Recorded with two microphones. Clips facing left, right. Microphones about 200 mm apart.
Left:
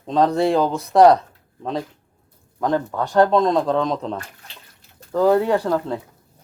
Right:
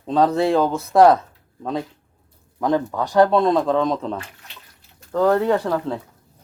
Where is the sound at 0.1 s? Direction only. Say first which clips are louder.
Even; 5° right (ahead or behind).